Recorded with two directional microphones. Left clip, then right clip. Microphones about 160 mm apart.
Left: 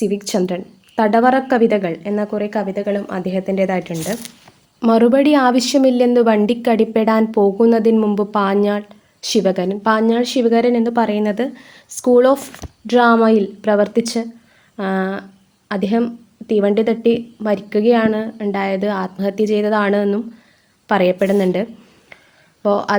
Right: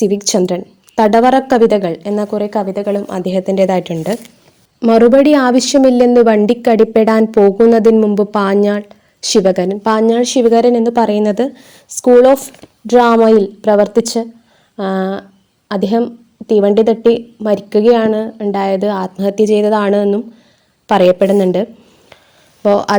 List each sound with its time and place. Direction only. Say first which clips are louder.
0.0 s a woman's voice: right 6 dB; 45° right (ahead or behind)
20.8 s a woman's voice: right 6 dB; 45° right (ahead or behind)